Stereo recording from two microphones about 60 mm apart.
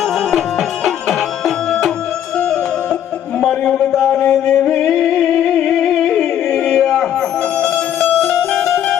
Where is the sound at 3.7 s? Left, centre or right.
Centre.